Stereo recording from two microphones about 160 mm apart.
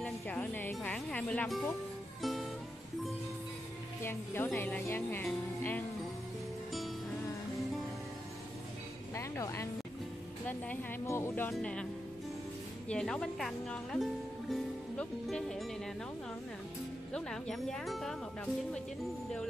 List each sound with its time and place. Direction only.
0.0 s speech: 10° left (ahead or behind)
4.0 s speech: 15° left (ahead or behind)
9.1 s music: 20° left (ahead or behind)
10.7 s speech: 15° left (ahead or behind)
17.1 s speech: 5° left (ahead or behind)